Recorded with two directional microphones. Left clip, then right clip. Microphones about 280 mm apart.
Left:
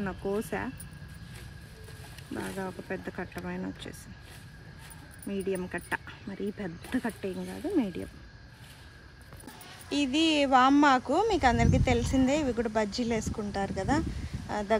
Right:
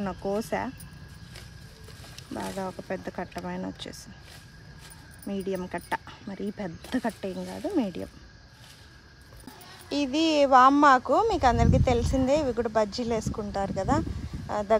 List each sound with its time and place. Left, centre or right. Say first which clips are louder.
0.0 s speech: right 3 dB; right
2.3 s speech: right 3 dB; right
5.3 s speech: right 1 dB; right
9.8 s speech: right 1 dB; right